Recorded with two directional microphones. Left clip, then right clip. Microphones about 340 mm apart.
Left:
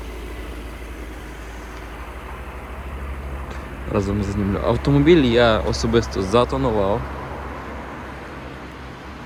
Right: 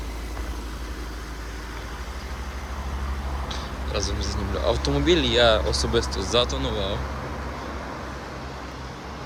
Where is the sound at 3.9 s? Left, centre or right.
Left.